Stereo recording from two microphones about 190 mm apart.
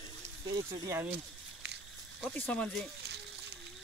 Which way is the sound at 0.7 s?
15° right (ahead or behind).